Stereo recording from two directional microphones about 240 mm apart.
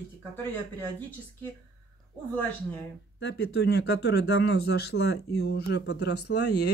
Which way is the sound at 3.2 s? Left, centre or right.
Left.